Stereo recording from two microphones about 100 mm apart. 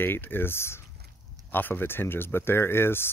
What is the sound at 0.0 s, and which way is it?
Speech, 20° left (ahead or behind).